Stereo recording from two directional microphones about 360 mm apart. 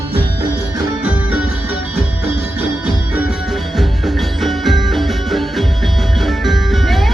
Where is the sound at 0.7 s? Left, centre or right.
Centre.